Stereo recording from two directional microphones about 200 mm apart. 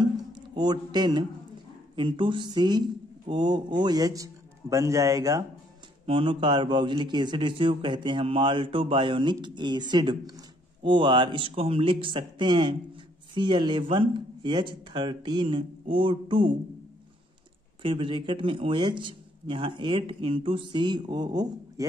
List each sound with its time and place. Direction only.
0.0 s a sound: 20° right (ahead or behind)
2.0 s a man's voice: 25° right (ahead or behind)
17.8 s speech: 25° right (ahead or behind)